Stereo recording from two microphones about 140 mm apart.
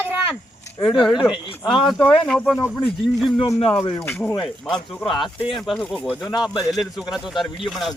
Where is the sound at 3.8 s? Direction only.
40° left (ahead or behind).